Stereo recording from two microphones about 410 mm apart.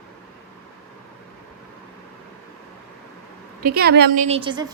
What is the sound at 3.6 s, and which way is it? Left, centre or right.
A woman's voice, right.